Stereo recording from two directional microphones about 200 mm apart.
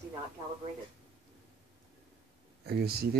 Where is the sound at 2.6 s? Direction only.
50° right (ahead or behind).